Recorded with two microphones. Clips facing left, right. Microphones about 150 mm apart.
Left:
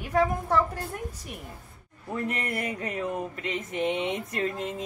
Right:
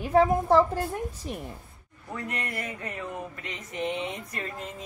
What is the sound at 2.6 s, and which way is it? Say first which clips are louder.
Speech: left 5 dB; 15° left (ahead or behind).